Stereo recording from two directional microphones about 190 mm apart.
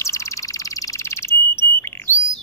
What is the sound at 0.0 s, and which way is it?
Bird, 15° left (ahead or behind).